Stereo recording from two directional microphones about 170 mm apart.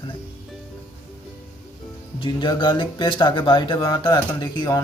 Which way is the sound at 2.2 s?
30° left (ahead or behind).